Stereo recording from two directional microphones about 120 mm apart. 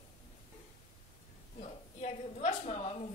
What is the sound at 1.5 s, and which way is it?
A woman's voice, 60° left (ahead or behind).